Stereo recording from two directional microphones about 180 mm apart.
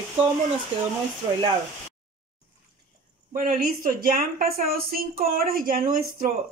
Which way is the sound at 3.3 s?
50° right (ahead or behind).